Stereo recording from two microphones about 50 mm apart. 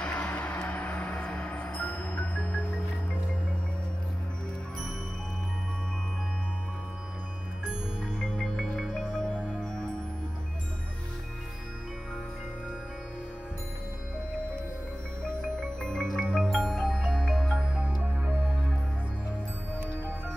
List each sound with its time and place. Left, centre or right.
0.0 s music: centre
0.3 s music: left
8.2 s music: centre
15.8 s music: centre
16.3 s music: centre
16.5 s music: centre
17.7 s music: right